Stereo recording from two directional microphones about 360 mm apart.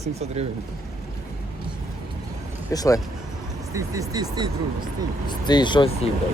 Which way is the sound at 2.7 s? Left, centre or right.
Centre.